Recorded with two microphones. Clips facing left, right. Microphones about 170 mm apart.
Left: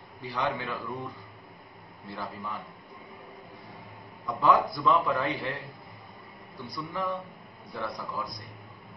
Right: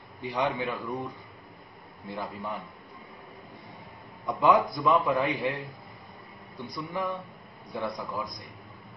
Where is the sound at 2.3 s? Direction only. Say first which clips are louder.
Right 2 dB; 20° right (ahead or behind).